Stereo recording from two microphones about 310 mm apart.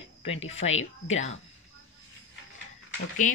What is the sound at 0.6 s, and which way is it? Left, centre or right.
Speech, left.